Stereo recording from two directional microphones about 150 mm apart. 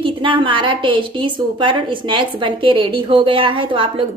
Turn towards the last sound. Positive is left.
turn(degrees=-35)  # may be behind; listen again after turning